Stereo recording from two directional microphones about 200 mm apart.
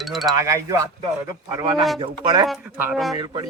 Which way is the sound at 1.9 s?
20° right (ahead or behind).